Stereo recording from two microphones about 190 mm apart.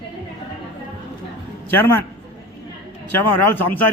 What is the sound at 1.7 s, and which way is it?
Speech, 10° left (ahead or behind).